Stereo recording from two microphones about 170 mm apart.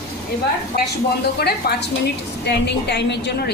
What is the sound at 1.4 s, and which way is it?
Speech, 65° left (ahead or behind).